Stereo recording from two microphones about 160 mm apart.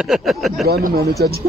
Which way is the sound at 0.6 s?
75° right (ahead or behind).